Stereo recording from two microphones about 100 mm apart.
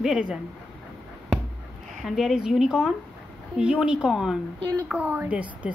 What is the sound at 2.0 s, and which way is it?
A woman's voice, 5° right (ahead or behind).